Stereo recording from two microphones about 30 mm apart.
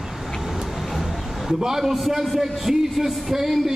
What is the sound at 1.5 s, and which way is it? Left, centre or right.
Speech, centre.